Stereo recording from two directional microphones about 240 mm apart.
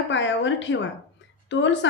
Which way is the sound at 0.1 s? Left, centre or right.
Left.